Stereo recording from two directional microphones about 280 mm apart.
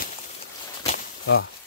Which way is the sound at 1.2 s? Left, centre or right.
Left.